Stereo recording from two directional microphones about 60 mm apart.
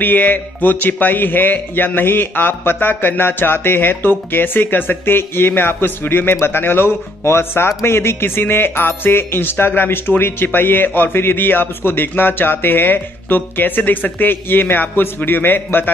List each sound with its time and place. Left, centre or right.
0.0 s speech: left